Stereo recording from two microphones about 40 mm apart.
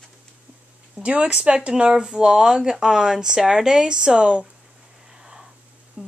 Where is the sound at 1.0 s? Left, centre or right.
Right.